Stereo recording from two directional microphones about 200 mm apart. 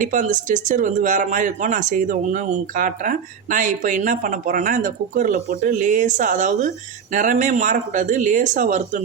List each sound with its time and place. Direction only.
0.0 s speech: 40° right (ahead or behind)